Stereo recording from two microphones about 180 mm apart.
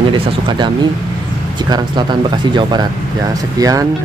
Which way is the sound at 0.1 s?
25° right (ahead or behind).